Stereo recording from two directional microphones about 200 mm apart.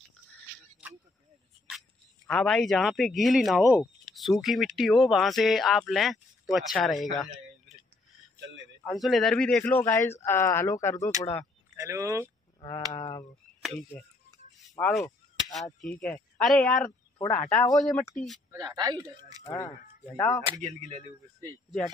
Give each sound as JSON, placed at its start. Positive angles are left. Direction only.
{"t": 2.2, "sound": "speech", "side_deg": 5}
{"t": 8.8, "sound": "speech", "side_deg": 0}
{"t": 11.7, "sound": "speech", "side_deg": -15}
{"t": 12.5, "sound": "a sound", "side_deg": 20}
{"t": 13.6, "sound": "speech", "side_deg": 0}
{"t": 18.5, "sound": "speech", "side_deg": -20}
{"t": 19.4, "sound": "speech", "side_deg": 20}
{"t": 20.6, "sound": "speech", "side_deg": -35}